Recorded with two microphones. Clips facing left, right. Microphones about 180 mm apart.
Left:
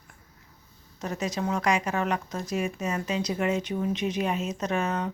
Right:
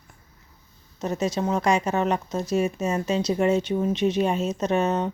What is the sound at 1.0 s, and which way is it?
Speech, 25° right (ahead or behind).